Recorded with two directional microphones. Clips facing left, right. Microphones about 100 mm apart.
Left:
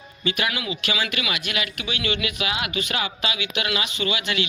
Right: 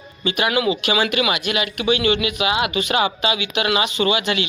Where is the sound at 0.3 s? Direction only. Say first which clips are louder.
Right 7 dB; 25° right (ahead or behind).